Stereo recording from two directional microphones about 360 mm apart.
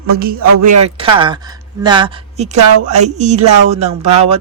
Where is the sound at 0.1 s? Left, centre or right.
Right.